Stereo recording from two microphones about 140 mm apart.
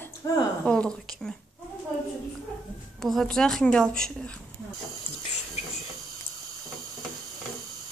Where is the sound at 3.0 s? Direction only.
Centre (ahead or behind).